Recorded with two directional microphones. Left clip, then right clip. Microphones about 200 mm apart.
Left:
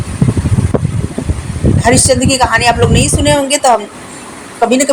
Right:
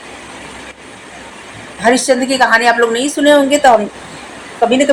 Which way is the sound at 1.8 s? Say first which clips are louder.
Even; 40° left (ahead or behind).